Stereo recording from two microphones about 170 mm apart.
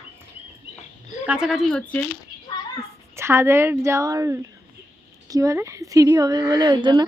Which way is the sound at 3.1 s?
15° right (ahead or behind).